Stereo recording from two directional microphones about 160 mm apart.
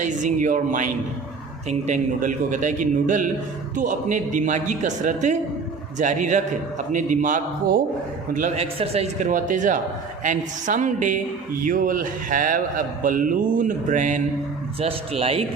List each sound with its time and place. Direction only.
0.0 s a man's voice: 50° right (ahead or behind)
14.8 s speech: 35° right (ahead or behind)